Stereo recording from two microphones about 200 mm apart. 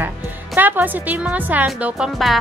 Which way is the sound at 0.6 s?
10° right (ahead or behind).